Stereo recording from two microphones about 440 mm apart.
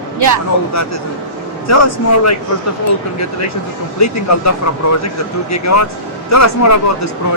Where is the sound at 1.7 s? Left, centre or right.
Left.